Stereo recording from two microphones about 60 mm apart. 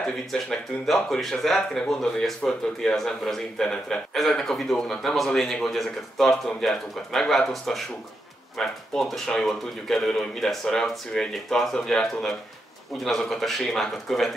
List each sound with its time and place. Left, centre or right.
0.0 s speech: centre